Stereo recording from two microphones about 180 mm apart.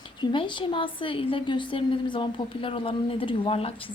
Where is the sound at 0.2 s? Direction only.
25° left (ahead or behind).